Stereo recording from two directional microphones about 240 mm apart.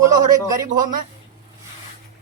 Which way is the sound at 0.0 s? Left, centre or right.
Centre.